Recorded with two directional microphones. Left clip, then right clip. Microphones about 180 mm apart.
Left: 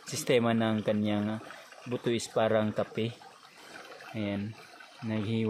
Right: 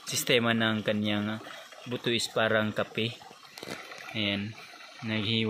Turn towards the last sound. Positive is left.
turn(degrees=10)  # may be behind; listen again after turning